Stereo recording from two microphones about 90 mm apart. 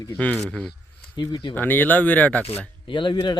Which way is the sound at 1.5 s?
20° left (ahead or behind).